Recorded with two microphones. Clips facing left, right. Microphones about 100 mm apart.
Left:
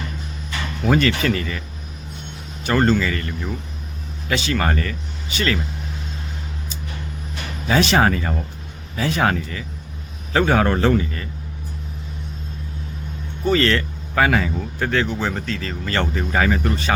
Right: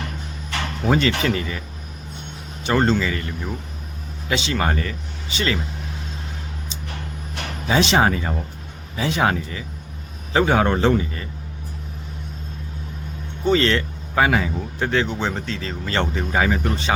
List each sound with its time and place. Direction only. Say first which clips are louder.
0.9 s speech: left 1 dB; 20° right (ahead or behind)
2.6 s speech: left 1 dB; 25° right (ahead or behind)
6.7 s a sound: left 1 dB; 25° right (ahead or behind)
7.4 s a sound: right 3 dB; 70° right (ahead or behind)
7.7 s speech: left 1 dB; 20° right (ahead or behind)
13.4 s speech: even; 20° right (ahead or behind)